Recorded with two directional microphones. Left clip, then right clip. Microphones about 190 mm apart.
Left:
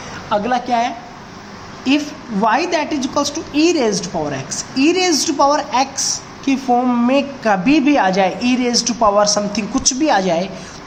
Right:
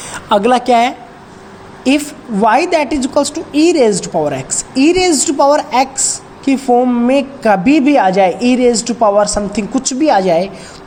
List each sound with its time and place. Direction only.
0.3 s a woman's voice: 55° right (ahead or behind)
1.8 s a woman's voice: 35° right (ahead or behind); by 7.1 s 15° right (ahead or behind)
7.1 s a woman's voice: 30° right (ahead or behind)